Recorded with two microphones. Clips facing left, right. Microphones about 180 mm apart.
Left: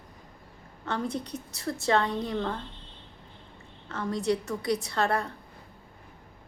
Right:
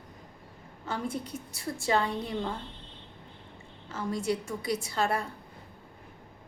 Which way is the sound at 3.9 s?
5° right (ahead or behind).